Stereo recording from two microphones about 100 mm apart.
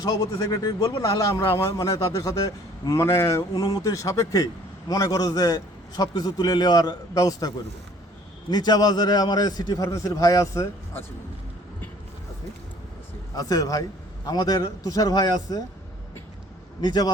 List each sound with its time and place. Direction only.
0.0 s a man's voice: 35° left (ahead or behind)
13.3 s a man's voice: 35° left (ahead or behind)
16.8 s a man's voice: 45° left (ahead or behind)